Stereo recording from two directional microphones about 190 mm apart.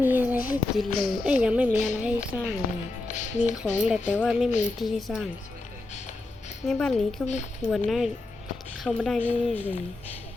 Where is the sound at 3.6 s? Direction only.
5° left (ahead or behind).